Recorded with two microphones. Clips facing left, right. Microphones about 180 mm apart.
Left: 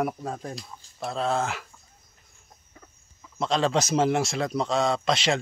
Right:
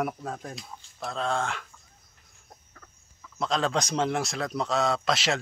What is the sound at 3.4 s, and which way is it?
A man's voice, centre (ahead or behind).